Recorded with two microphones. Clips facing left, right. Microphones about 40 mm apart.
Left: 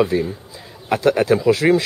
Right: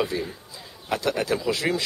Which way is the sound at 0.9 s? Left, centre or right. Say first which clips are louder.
Left 9 dB; left.